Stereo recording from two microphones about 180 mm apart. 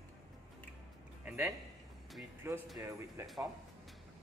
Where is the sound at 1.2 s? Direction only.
5° right (ahead or behind).